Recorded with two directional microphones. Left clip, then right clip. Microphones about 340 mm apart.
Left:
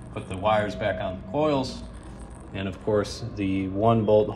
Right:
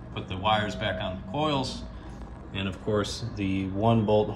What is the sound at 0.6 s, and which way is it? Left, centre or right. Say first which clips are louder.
Speech: left 4 dB; left.